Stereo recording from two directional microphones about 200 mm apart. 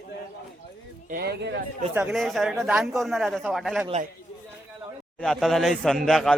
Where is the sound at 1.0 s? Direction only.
50° right (ahead or behind).